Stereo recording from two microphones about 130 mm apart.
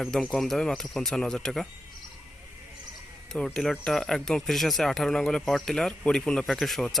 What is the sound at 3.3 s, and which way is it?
Speech, 5° left (ahead or behind).